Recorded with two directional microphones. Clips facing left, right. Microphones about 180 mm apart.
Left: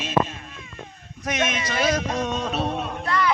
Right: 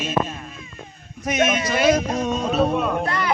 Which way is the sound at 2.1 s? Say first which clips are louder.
Right 3 dB; 5° right (ahead or behind).